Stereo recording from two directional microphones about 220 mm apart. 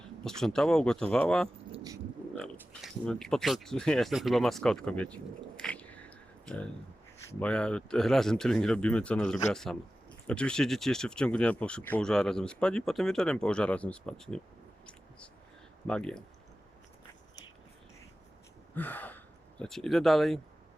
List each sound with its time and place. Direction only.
0.3 s speech: centre (ahead or behind)
1.7 s dog: 15° right (ahead or behind)
2.3 s speech: 5° left (ahead or behind)
15.9 s speech: 5° left (ahead or behind)
18.7 s speech: 10° left (ahead or behind)